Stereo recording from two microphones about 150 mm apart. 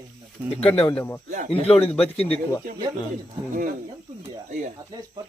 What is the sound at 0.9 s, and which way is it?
Speech, 15° left (ahead or behind).